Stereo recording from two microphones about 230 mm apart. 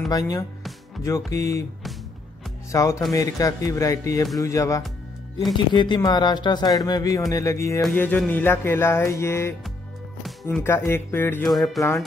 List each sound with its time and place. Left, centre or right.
0.1 s speech: centre
2.7 s speech: centre